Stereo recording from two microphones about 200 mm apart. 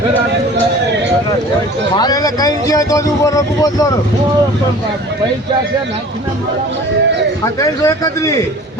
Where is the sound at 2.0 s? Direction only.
20° left (ahead or behind).